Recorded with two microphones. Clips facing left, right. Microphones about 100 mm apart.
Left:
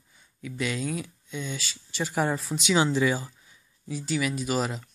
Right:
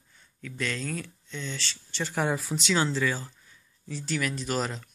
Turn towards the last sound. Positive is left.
turn(degrees=5)  # may be behind; listen again after turning